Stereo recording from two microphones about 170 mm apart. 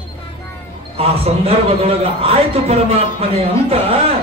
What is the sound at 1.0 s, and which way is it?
A man's voice, 35° right (ahead or behind).